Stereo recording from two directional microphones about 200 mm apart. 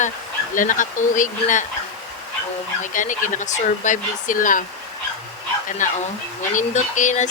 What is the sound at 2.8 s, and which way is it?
A man's voice, 40° left (ahead or behind).